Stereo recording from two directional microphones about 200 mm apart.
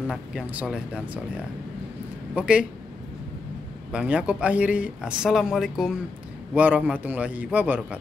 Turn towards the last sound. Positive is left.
turn(degrees=-10)  # may be behind; listen again after turning